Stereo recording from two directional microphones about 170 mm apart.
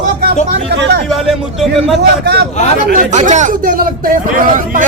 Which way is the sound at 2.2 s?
75° right (ahead or behind).